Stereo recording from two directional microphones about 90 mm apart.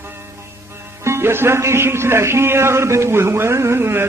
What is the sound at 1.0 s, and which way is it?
Mantra, 30° right (ahead or behind).